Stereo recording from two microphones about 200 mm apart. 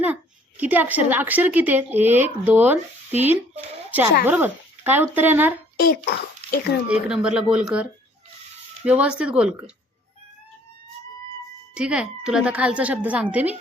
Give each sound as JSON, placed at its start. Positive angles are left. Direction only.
{"t": 0.0, "sound": "a woman's voice", "side_deg": -10}
{"t": 4.3, "sound": "speech", "side_deg": -10}
{"t": 5.8, "sound": "a child's voice", "side_deg": 50}
{"t": 6.8, "sound": "speech", "side_deg": -5}
{"t": 11.7, "sound": "speech", "side_deg": -5}